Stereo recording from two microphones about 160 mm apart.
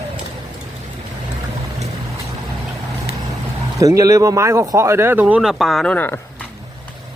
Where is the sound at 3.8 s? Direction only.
20° right (ahead or behind); by 6.4 s 10° left (ahead or behind).